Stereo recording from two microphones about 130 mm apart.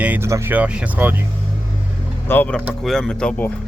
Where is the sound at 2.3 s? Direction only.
15° left (ahead or behind).